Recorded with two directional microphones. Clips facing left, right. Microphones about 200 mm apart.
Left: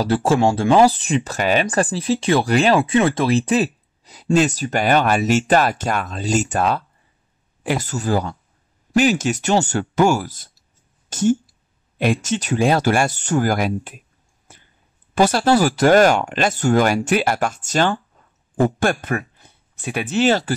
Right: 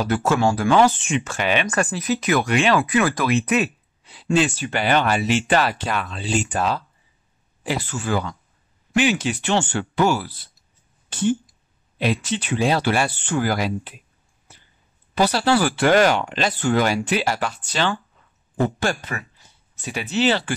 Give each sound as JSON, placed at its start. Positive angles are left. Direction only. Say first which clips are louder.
{"t": 0.0, "sound": "speech", "louder": "left 3 dB", "side_deg": 30}
{"t": 2.8, "sound": "speech", "louder": "left 3 dB", "side_deg": 25}
{"t": 11.1, "sound": "a sound", "louder": "left 4 dB", "side_deg": 45}
{"t": 12.0, "sound": "speech", "louder": "left 3 dB", "side_deg": 45}
{"t": 14.5, "sound": "a sound", "louder": "left 3 dB", "side_deg": 50}
{"t": 15.1, "sound": "speech", "louder": "left 3 dB", "side_deg": 50}